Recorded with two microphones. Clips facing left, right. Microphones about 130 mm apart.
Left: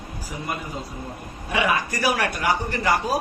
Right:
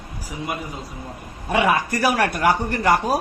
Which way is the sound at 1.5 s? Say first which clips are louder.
Right 4 dB; 55° right (ahead or behind).